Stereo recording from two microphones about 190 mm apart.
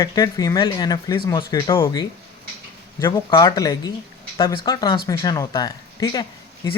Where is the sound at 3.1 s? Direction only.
20° left (ahead or behind).